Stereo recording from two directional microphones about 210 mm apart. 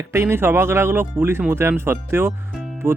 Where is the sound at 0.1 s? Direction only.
10° right (ahead or behind).